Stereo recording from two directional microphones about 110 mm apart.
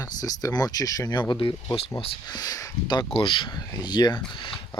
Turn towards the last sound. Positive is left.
turn(degrees=50)  # may be behind; listen again after turning